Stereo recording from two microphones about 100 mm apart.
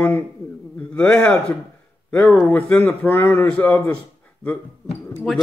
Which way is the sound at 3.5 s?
10° left (ahead or behind).